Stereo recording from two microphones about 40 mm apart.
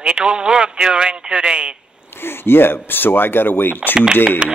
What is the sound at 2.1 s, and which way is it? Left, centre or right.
Speech, left.